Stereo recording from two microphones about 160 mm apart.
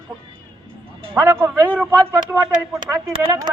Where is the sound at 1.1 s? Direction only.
15° right (ahead or behind).